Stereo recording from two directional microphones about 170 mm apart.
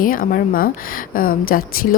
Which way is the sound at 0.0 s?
55° left (ahead or behind).